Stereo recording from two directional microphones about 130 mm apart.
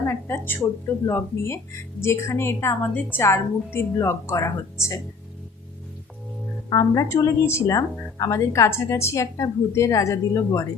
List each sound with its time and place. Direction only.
0.0 s a woman's voice: 20° left (ahead or behind)
6.7 s a woman's voice: 30° left (ahead or behind)